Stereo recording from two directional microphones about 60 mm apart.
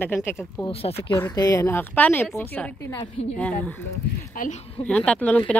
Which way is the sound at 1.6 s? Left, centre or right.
Left.